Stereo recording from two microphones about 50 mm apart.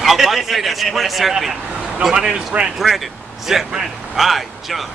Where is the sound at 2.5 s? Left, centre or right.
Right.